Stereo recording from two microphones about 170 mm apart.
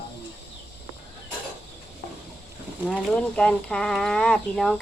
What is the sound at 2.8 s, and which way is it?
Speech, 5° left (ahead or behind).